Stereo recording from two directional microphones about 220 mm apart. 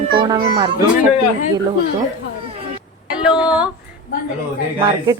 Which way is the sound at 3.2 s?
5° right (ahead or behind).